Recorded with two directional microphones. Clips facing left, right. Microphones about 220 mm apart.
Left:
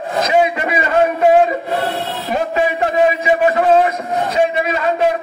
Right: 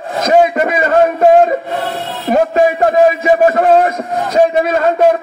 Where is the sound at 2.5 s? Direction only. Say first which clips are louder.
Right 5 dB; 45° right (ahead or behind).